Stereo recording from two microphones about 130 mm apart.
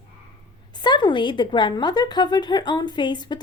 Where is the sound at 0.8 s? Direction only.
35° left (ahead or behind).